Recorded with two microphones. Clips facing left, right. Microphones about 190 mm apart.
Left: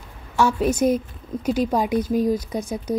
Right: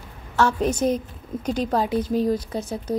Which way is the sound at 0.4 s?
10° left (ahead or behind).